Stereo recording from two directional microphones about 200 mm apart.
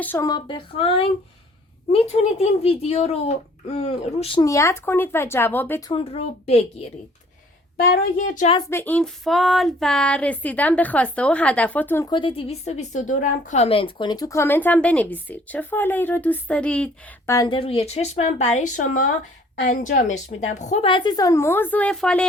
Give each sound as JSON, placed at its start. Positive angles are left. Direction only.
{"t": 0.0, "sound": "a woman's voice", "side_deg": 15}
{"t": 5.9, "sound": "a woman's voice", "side_deg": 30}
{"t": 8.7, "sound": "a sound", "side_deg": 10}
{"t": 12.1, "sound": "a woman's voice", "side_deg": 25}